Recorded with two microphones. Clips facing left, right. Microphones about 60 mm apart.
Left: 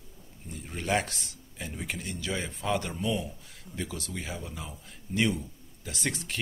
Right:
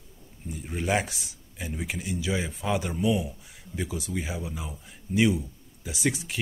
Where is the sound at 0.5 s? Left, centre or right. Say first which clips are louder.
Right 2 dB; centre.